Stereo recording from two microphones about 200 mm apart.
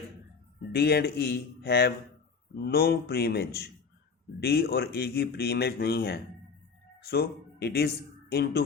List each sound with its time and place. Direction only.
0.7 s speech: 55° left (ahead or behind)